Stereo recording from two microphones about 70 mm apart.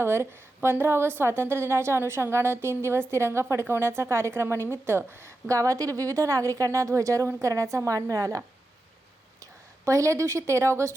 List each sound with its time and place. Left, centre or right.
0.0 s a woman's voice: right
5.5 s a woman's voice: right